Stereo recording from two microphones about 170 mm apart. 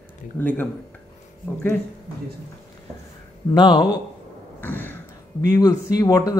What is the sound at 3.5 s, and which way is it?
Speech, 25° left (ahead or behind).